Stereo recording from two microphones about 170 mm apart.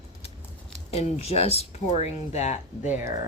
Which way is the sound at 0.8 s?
40° left (ahead or behind).